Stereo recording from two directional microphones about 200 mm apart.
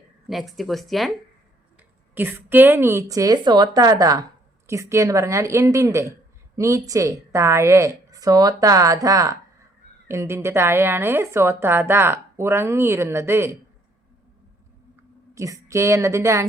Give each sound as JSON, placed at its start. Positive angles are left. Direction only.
{"t": 0.3, "sound": "speech", "side_deg": 0}
{"t": 2.1, "sound": "a woman's voice", "side_deg": -10}
{"t": 15.4, "sound": "a woman's voice", "side_deg": -15}